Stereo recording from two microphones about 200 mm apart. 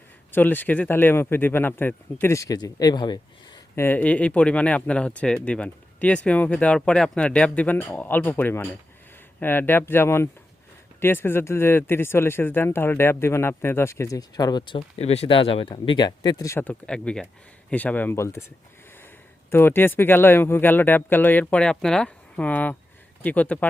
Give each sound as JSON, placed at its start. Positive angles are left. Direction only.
{"t": 0.3, "sound": "speech", "side_deg": 10}
{"t": 3.8, "sound": "speech", "side_deg": 5}
{"t": 14.8, "sound": "speech", "side_deg": 30}
{"t": 19.5, "sound": "speech", "side_deg": 10}